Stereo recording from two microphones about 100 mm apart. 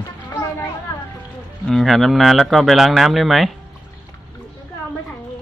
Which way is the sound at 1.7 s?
Centre (ahead or behind).